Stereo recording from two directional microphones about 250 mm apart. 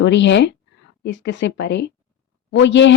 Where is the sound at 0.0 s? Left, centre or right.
Left.